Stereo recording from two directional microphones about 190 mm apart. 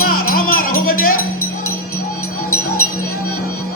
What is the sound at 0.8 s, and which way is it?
Music, 50° left (ahead or behind).